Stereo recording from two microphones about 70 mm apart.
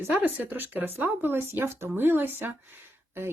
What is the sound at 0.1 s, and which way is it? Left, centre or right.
Speech, right.